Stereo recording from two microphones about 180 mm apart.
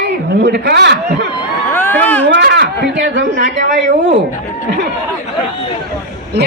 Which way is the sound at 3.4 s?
45° right (ahead or behind).